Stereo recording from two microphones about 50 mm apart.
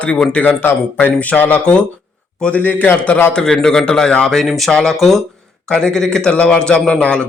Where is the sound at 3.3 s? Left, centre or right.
Centre.